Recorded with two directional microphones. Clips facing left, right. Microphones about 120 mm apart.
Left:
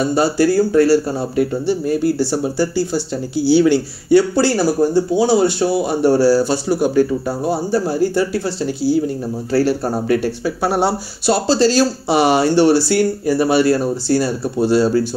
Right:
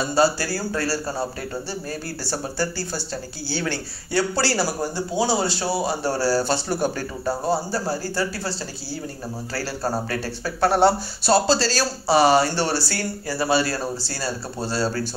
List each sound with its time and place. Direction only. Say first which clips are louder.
0.0 s speech: left 6 dB; 20° left (ahead or behind)
11.4 s speech: left 8 dB; 20° left (ahead or behind)